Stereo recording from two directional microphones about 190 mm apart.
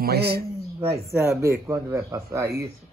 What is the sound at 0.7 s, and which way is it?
Speech, 15° right (ahead or behind).